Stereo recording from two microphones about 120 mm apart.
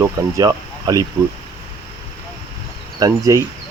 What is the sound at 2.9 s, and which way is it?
Speech, 30° right (ahead or behind).